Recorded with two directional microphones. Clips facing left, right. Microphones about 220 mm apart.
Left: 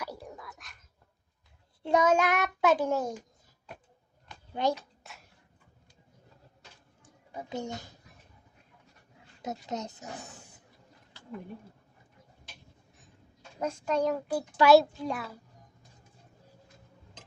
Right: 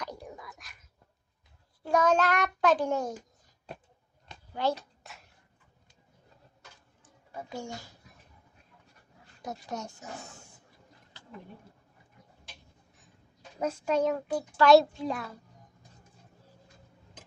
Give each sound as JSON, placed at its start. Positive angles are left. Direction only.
{"t": 0.0, "sound": "whispering", "side_deg": 5}
{"t": 2.0, "sound": "child singing", "side_deg": 10}
{"t": 4.6, "sound": "speech", "side_deg": 20}
{"t": 5.0, "sound": "a sound", "side_deg": 0}
{"t": 7.0, "sound": "a sound", "side_deg": 20}
{"t": 9.4, "sound": "speech", "side_deg": 20}
{"t": 13.6, "sound": "a child's voice", "side_deg": -5}